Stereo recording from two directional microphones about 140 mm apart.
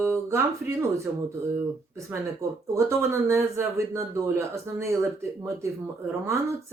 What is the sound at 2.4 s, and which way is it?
A woman's voice, 20° right (ahead or behind).